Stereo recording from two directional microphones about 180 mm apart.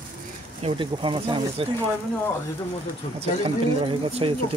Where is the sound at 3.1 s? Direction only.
30° right (ahead or behind).